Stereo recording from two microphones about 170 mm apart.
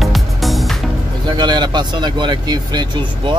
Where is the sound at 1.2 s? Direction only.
25° right (ahead or behind).